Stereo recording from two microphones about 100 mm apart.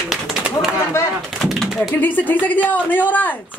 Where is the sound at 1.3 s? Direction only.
Centre (ahead or behind).